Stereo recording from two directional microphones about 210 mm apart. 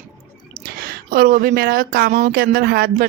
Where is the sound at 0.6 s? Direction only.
45° right (ahead or behind).